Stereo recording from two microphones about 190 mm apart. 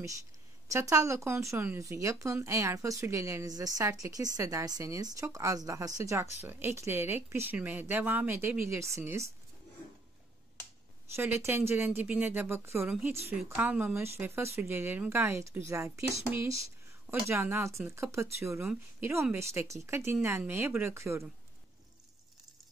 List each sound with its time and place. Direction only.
0.7 s speech: 15° right (ahead or behind)
11.1 s speech: 10° right (ahead or behind)